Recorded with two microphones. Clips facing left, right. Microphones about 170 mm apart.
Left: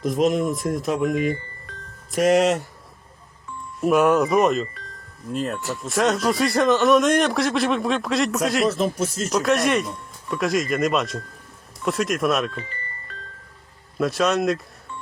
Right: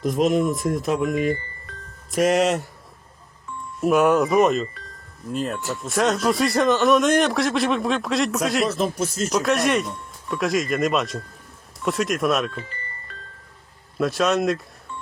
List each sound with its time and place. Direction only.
0.0 s speech: centre (ahead or behind)
2.2 s speech: 45° left (ahead or behind)
3.8 s speech: centre (ahead or behind)